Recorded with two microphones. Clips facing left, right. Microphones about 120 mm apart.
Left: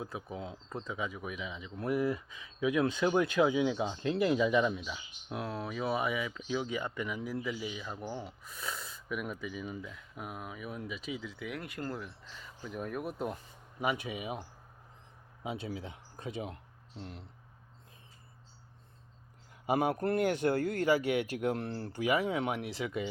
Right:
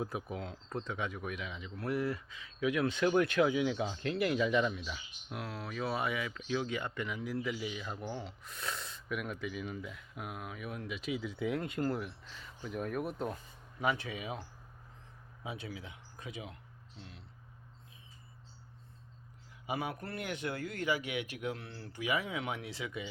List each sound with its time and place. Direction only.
0.3 s speech: 5° left (ahead or behind)
1.7 s speech: 20° left (ahead or behind)
5.3 s speech: 25° left (ahead or behind)
7.4 s speech: centre (ahead or behind)
11.3 s speech: 25° right (ahead or behind)
11.8 s speech: 10° right (ahead or behind)
12.3 s speech: centre (ahead or behind)
13.3 s speech: 15° left (ahead or behind)
15.4 s speech: 25° left (ahead or behind); by 17.2 s 45° left (ahead or behind)
19.6 s speech: 45° left (ahead or behind)